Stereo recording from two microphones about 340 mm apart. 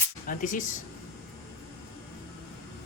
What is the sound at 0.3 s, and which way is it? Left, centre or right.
Speech, left.